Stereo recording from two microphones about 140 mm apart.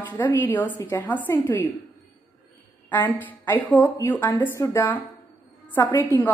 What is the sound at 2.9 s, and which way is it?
A woman's voice, 15° left (ahead or behind).